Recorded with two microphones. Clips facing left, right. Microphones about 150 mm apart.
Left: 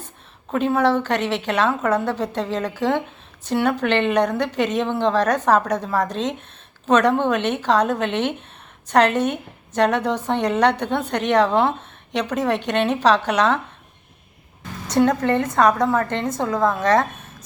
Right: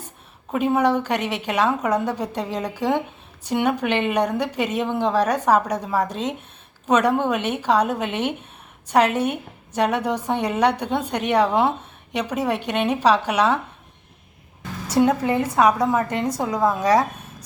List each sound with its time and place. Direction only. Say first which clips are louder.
0.5 s a woman's voice: left 1 dB; 10° right (ahead or behind)
14.9 s a woman's voice: left 1 dB; 10° right (ahead or behind)